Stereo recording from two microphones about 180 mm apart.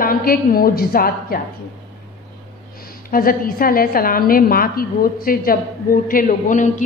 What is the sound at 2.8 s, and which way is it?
A woman's voice, 55° left (ahead or behind).